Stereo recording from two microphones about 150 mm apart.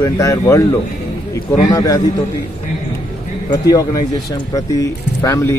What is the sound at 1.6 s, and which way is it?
Speech, 25° left (ahead or behind).